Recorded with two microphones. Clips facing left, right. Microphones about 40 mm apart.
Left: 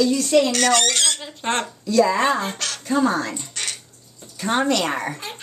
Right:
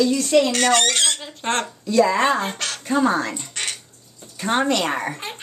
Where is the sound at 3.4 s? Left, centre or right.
Right.